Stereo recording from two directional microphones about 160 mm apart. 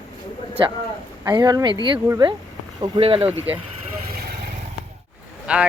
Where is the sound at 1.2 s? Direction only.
25° right (ahead or behind).